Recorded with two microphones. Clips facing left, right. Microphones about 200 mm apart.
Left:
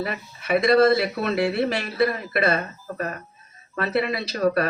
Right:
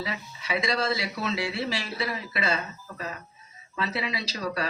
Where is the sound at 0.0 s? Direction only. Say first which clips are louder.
Left 5 dB; 55° left (ahead or behind).